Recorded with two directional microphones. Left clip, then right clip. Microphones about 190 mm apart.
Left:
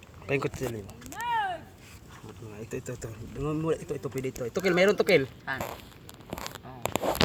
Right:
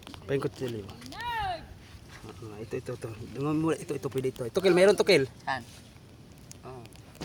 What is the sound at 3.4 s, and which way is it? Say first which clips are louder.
Speech: right 1 dB; 40° right (ahead or behind).